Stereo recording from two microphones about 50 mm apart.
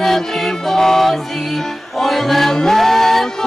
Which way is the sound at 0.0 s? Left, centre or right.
Centre.